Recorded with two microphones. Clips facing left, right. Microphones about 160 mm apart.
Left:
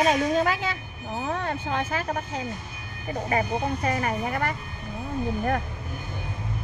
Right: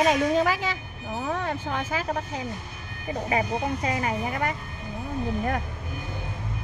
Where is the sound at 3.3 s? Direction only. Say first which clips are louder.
Left 1 dB; 15° right (ahead or behind).